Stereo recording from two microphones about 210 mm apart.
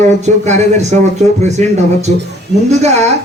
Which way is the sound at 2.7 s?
30° right (ahead or behind).